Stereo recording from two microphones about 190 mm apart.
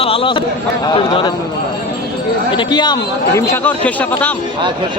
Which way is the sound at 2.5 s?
20° left (ahead or behind).